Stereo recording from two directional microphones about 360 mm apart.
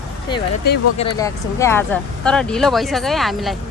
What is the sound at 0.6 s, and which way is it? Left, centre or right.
Speech, left.